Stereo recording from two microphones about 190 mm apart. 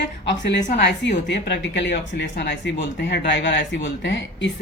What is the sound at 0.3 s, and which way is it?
Speech, 65° left (ahead or behind).